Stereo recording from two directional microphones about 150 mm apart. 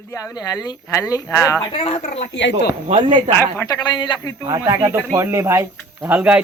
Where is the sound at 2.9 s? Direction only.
30° right (ahead or behind).